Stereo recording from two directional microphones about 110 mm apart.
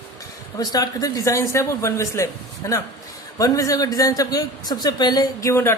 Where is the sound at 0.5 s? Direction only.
35° left (ahead or behind).